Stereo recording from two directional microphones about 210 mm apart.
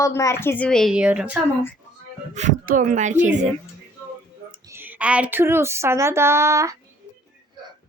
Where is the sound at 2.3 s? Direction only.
35° right (ahead or behind).